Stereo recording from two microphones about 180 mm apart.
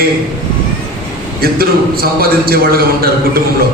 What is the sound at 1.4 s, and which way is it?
A man's voice, 55° right (ahead or behind).